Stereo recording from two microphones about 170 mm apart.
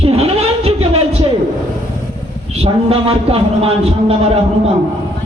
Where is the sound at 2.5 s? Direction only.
35° right (ahead or behind).